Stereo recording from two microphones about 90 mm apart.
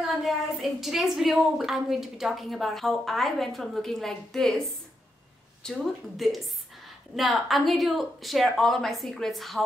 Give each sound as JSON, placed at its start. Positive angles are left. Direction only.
{"t": 0.0, "sound": "a woman's voice", "side_deg": 0}